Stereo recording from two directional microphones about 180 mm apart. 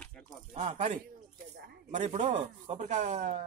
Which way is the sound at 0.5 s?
40° right (ahead or behind).